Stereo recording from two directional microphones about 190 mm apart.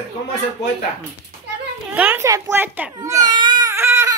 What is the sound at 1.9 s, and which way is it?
Baby cry, 10° right (ahead or behind).